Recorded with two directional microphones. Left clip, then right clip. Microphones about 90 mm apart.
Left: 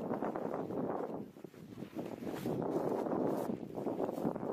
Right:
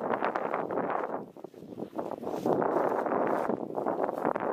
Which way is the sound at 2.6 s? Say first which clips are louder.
Right 5 dB; 65° right (ahead or behind).